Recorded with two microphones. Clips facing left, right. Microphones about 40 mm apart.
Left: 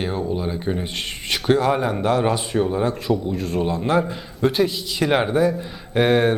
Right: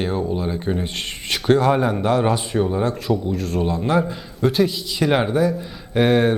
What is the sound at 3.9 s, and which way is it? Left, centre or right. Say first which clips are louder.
Speech: even; centre.